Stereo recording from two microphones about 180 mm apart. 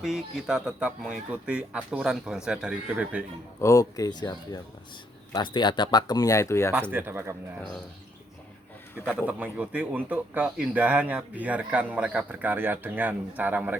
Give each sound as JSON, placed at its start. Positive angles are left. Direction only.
{"t": 0.0, "sound": "speech", "side_deg": -5}
{"t": 3.6, "sound": "speech", "side_deg": 20}
{"t": 6.9, "sound": "speech", "side_deg": -10}
{"t": 9.0, "sound": "speech", "side_deg": -10}